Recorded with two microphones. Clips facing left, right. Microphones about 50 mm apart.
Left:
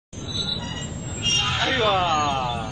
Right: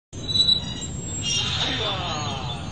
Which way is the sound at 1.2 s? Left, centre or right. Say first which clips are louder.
Left 5 dB; left.